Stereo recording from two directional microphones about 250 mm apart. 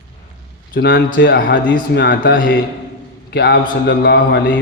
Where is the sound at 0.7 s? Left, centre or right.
Left.